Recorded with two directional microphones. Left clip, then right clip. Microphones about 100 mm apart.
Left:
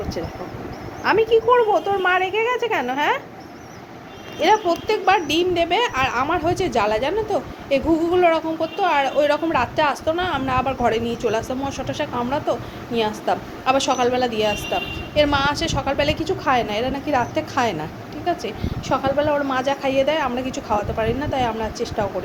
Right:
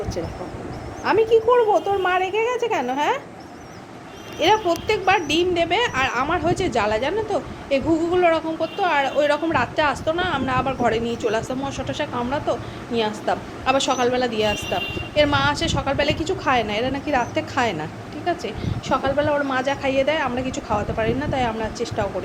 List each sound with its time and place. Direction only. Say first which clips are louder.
1.0 s a woman's voice: even; 25° right (ahead or behind)
4.6 s a woman's voice: left 1 dB; 5° right (ahead or behind)